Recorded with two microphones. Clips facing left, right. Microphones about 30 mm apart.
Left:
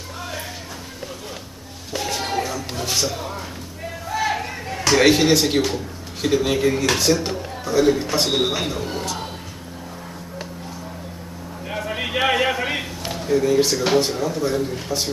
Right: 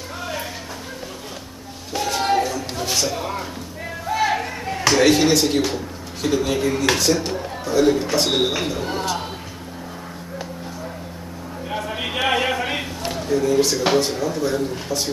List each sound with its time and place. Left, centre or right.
0.2 s music: centre
1.9 s music: centre
3.2 s speech: centre
4.1 s chop: centre
4.9 s speech: centre
8.8 s a sound: centre
11.7 s a sound: centre
13.9 s speech: centre